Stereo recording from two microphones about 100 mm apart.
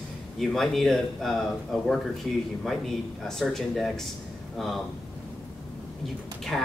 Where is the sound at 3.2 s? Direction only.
Centre (ahead or behind).